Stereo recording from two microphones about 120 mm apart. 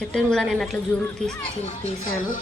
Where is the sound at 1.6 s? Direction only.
75° left (ahead or behind).